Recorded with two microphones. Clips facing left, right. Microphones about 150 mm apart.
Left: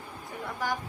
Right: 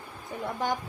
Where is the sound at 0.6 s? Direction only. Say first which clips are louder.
Right 2 dB; 25° right (ahead or behind).